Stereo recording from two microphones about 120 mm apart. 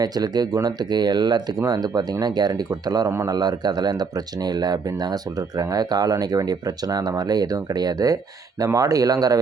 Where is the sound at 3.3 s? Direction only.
35° right (ahead or behind).